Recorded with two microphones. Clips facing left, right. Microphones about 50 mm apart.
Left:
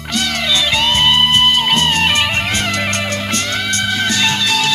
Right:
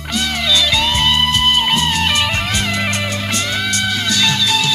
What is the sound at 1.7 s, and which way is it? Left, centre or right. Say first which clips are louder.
Music: left 2 dB; left.